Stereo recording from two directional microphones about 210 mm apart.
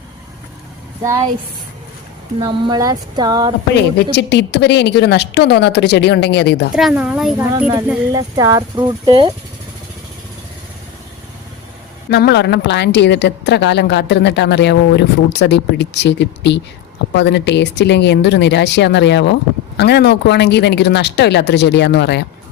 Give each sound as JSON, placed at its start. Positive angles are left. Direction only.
{"t": 2.4, "sound": "speech", "side_deg": -20}
{"t": 3.8, "sound": "a woman's voice", "side_deg": 55}
{"t": 6.7, "sound": "a woman's voice", "side_deg": -5}
{"t": 8.1, "sound": "speech", "side_deg": -15}
{"t": 12.1, "sound": "speech", "side_deg": 55}